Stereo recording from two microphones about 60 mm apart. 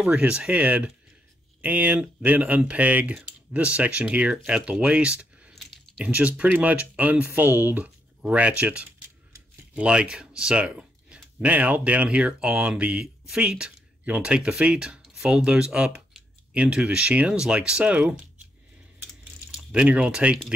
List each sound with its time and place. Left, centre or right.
0.0 s speech: centre; by 7.8 s right
7.8 s speech: right
11.4 s speech: right
19.5 s speech: centre